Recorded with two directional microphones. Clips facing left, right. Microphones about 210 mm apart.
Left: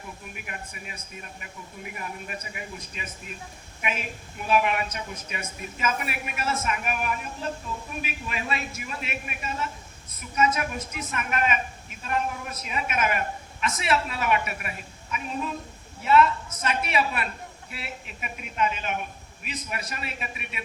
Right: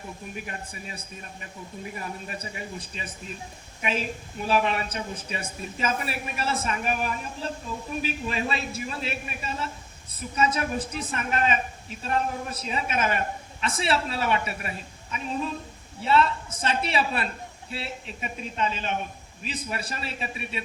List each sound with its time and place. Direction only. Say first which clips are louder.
0.3 s a woman's voice: right 3 dB; 30° right (ahead or behind)
16.0 s a woman's voice: left 2 dB; 30° right (ahead or behind)